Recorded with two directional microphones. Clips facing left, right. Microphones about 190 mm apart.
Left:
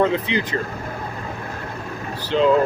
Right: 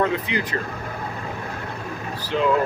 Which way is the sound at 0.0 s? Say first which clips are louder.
Left 3 dB; 25° left (ahead or behind).